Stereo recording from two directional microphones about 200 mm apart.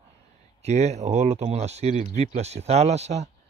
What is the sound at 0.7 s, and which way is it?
Speech, 35° right (ahead or behind).